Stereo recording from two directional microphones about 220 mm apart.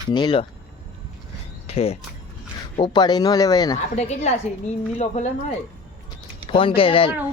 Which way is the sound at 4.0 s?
30° left (ahead or behind).